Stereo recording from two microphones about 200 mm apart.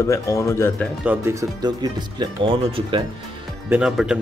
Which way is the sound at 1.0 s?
15° right (ahead or behind).